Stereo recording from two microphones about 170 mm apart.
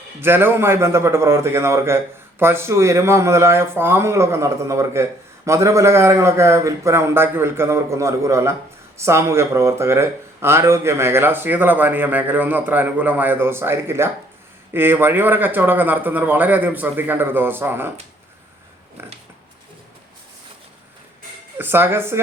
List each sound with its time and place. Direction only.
0.2 s speech: 10° right (ahead or behind)
21.6 s speech: 15° right (ahead or behind)